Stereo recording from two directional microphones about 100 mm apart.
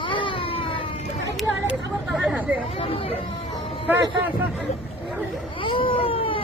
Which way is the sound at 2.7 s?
70° left (ahead or behind).